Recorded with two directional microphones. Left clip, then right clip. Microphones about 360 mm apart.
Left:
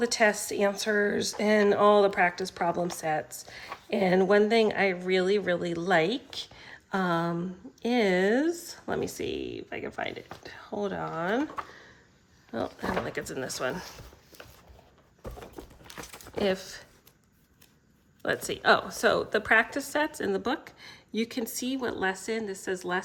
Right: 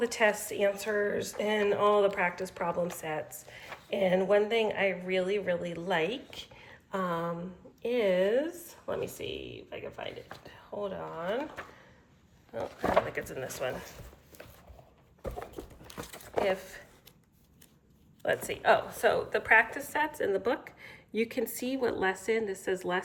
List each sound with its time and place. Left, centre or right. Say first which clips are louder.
0.0 s speech: left 3 dB; centre
6.6 s a sound: left 3 dB; centre
7.8 s speech: left 2 dB; centre
9.3 s speech: left 6 dB; left
9.6 s speech: left 5 dB; centre
13.1 s speech: left 2 dB; centre
15.9 s crumpling: left 2 dB; centre
16.4 s speech: left 1 dB; centre
18.2 s speech: left 1 dB; centre